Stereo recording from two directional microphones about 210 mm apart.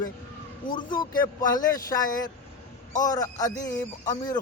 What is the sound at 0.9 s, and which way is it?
Speech, 40° left (ahead or behind).